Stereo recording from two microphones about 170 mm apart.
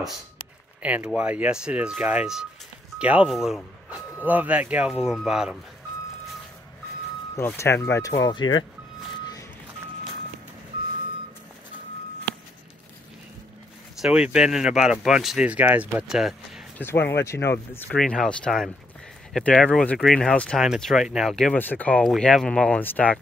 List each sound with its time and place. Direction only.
0.8 s speech: 5° right (ahead or behind)
7.3 s speech: 15° left (ahead or behind)
14.0 s speech: 5° right (ahead or behind)
16.7 s speech: 15° left (ahead or behind)